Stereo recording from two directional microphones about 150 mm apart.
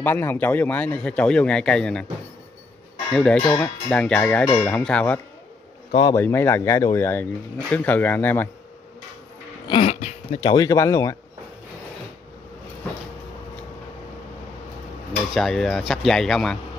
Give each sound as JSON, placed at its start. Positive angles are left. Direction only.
{"t": 0.0, "sound": "speech", "side_deg": 15}
{"t": 3.1, "sound": "speech", "side_deg": 5}
{"t": 9.7, "sound": "a sound", "side_deg": 40}
{"t": 10.5, "sound": "speech", "side_deg": 25}
{"t": 15.3, "sound": "speech", "side_deg": 0}